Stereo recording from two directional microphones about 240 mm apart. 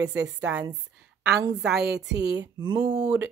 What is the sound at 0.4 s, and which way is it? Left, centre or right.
A woman's voice, centre.